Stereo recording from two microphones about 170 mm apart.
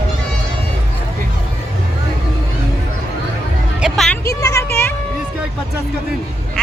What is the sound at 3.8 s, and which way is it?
Music, centre (ahead or behind).